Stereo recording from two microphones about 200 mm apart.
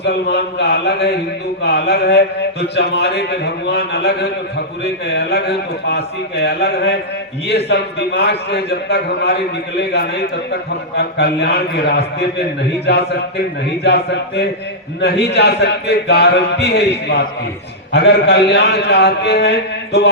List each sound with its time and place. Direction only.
0.0 s a man's voice: 55° left (ahead or behind)
10.5 s a man's voice: 55° left (ahead or behind)